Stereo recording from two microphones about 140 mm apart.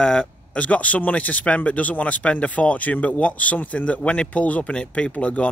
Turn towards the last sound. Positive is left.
turn(degrees=10)  # may be behind; listen again after turning